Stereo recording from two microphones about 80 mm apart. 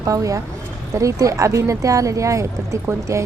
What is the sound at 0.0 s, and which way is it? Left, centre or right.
A woman's voice, right.